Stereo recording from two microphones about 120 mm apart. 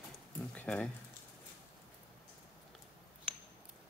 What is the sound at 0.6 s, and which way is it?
Speech, 15° left (ahead or behind).